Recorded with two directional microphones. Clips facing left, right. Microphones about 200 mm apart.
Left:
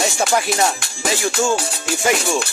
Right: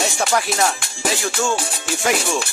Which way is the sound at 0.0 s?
Centre (ahead or behind).